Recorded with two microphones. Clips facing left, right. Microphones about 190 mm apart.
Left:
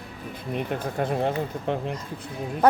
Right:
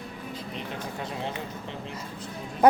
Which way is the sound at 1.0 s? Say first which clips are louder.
Left 11 dB; 55° left (ahead or behind).